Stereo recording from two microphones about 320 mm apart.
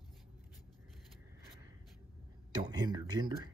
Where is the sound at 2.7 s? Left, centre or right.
Centre.